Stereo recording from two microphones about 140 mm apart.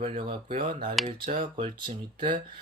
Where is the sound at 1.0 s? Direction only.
70° right (ahead or behind).